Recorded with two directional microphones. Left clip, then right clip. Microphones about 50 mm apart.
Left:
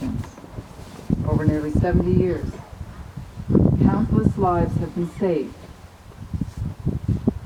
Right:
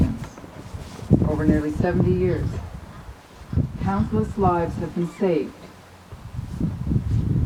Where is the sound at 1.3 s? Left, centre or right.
Centre.